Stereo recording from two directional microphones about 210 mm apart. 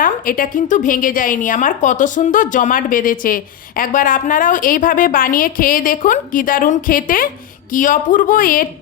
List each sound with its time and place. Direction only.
0.0 s a woman's voice: 40° left (ahead or behind)